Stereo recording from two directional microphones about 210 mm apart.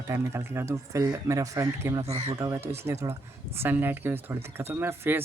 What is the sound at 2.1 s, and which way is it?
Speech, 30° right (ahead or behind).